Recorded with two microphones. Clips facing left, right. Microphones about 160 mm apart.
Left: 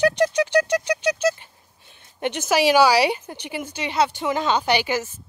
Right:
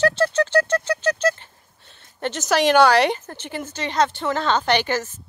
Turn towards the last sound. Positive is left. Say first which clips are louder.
# right 1 dB
turn(degrees=10)  # may be behind; listen again after turning